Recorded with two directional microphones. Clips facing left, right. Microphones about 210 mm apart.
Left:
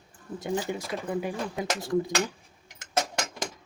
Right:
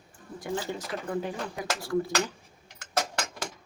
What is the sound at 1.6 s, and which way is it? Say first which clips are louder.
Speech: left 2 dB; 20° left (ahead or behind).